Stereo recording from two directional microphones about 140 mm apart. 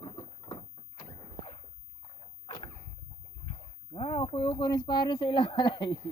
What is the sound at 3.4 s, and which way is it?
Speech, 35° left (ahead or behind).